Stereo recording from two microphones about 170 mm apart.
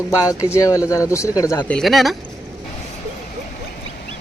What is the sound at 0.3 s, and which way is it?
Speech, 15° left (ahead or behind).